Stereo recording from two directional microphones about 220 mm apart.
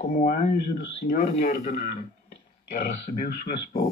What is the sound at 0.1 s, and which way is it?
Speech, 35° left (ahead or behind).